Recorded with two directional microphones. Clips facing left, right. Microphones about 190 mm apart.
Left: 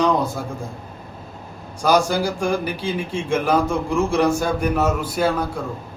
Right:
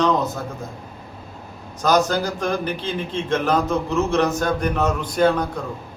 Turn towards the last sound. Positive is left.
turn(degrees=5)  # may be behind; listen again after turning